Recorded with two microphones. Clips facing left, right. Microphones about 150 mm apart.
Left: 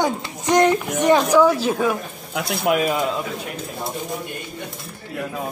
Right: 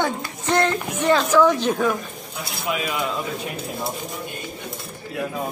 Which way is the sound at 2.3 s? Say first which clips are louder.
Left 8 dB; 65° left (ahead or behind).